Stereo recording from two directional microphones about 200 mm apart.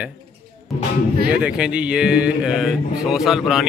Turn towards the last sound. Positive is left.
turn(degrees=0)  # may be behind; listen again after turning